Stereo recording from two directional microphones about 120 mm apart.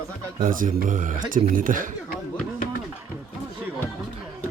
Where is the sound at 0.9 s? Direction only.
90° right.